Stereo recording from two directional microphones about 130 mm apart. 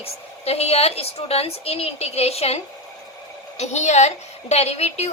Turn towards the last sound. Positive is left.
turn(degrees=55)  # may be behind; listen again after turning